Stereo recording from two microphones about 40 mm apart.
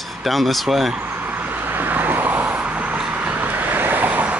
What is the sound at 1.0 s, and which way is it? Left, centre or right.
Vehicle, right.